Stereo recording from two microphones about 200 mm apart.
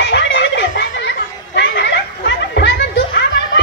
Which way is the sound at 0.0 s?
60° left (ahead or behind).